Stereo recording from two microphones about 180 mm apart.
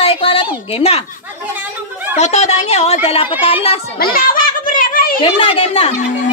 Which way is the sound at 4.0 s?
55° left (ahead or behind).